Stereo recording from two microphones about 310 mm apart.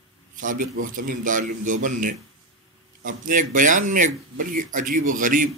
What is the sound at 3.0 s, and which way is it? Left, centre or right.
Speech, right.